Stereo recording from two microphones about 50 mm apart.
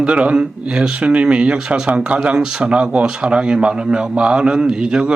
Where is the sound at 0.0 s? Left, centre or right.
Right.